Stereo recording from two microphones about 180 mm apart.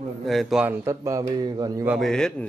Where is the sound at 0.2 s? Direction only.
Centre (ahead or behind); by 1.9 s 20° right (ahead or behind).